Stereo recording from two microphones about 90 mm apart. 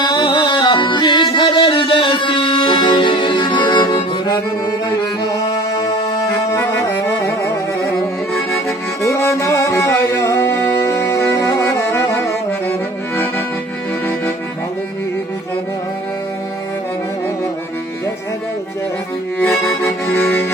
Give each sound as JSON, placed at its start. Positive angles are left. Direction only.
{"t": 0.0, "sound": "music", "side_deg": 45}
{"t": 0.3, "sound": "music", "side_deg": 60}
{"t": 1.5, "sound": "music", "side_deg": 70}
{"t": 6.8, "sound": "music", "side_deg": 30}
{"t": 9.0, "sound": "music", "side_deg": 30}
{"t": 11.9, "sound": "saxophone", "side_deg": 35}
{"t": 19.4, "sound": "music", "side_deg": 5}
{"t": 20.1, "sound": "accordion", "side_deg": 20}